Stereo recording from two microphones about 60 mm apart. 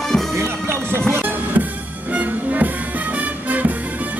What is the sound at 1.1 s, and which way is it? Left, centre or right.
Music, right.